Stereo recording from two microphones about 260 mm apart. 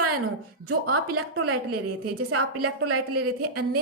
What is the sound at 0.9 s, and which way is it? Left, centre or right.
A woman's voice, right.